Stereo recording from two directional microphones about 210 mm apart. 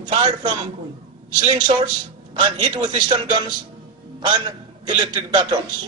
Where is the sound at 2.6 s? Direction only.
20° right (ahead or behind).